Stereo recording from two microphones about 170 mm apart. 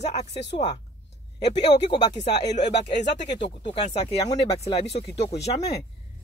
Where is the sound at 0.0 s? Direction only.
40° left (ahead or behind).